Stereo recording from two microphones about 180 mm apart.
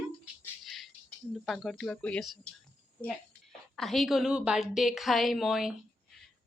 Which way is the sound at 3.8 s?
Centre (ahead or behind).